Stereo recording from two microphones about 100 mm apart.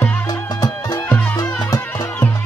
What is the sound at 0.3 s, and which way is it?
Music, 40° left (ahead or behind).